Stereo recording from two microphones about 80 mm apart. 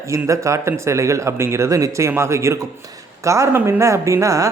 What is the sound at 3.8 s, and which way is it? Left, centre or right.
Speech, right.